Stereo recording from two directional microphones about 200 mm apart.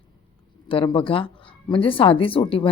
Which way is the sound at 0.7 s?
25° left (ahead or behind).